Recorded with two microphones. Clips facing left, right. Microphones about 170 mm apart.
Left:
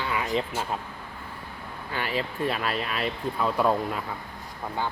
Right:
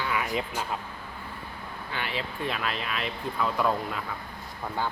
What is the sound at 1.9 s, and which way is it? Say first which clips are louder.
Speech: left 4 dB; 40° left (ahead or behind).